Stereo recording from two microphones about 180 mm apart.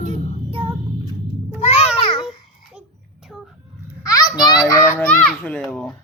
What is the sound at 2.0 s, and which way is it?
Babbling, 30° left (ahead or behind).